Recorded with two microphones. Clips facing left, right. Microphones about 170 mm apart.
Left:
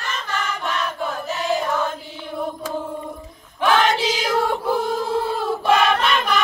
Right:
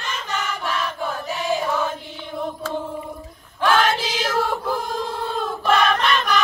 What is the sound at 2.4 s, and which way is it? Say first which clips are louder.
Chant: even; 5° left (ahead or behind).